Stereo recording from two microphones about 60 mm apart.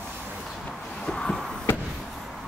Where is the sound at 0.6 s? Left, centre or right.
Centre.